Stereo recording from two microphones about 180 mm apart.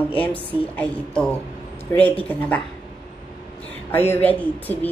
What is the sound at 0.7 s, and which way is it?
A woman's voice, 5° left (ahead or behind).